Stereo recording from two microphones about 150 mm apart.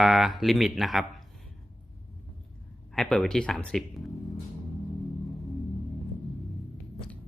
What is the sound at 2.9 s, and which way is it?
Speech, 5° left (ahead or behind).